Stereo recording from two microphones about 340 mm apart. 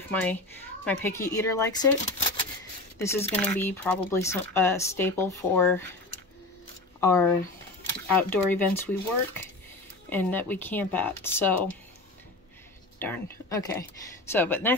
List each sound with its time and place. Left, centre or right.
0.1 s speech: centre
7.0 s speech: centre
10.0 s speech: centre
13.0 s speech: centre